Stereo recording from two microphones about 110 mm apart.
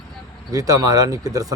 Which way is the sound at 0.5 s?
30° right (ahead or behind).